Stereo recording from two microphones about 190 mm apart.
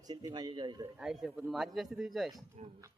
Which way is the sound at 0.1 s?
20° right (ahead or behind).